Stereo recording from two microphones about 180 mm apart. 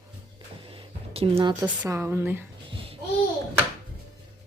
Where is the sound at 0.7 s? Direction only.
30° right (ahead or behind).